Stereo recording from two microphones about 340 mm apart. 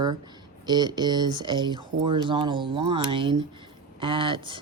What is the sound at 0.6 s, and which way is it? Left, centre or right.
Speech, centre.